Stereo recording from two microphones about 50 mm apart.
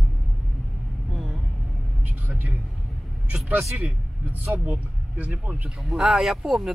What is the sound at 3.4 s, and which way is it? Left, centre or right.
Speech, right.